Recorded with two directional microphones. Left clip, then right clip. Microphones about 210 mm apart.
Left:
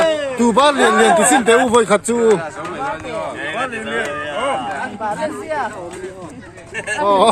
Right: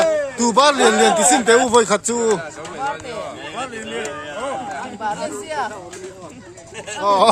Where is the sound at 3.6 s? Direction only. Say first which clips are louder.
Left 5 dB; 10° right (ahead or behind).